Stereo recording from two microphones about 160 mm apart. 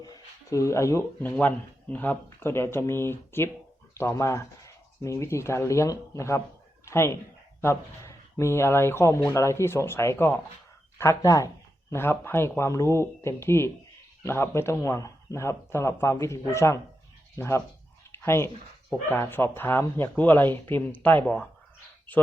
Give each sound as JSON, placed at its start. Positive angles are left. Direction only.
{"t": 0.0, "sound": "speech", "side_deg": 20}